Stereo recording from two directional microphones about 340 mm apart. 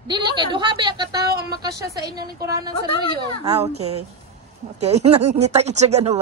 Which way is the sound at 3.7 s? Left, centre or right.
Right.